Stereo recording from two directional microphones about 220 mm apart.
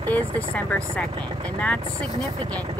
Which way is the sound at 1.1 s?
20° right (ahead or behind).